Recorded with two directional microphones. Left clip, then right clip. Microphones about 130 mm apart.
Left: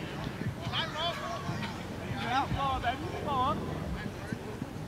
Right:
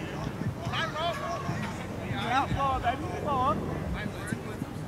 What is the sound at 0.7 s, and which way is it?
Vehicle, 20° right (ahead or behind).